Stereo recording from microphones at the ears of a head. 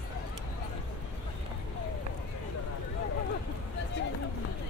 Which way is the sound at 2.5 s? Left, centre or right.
Left.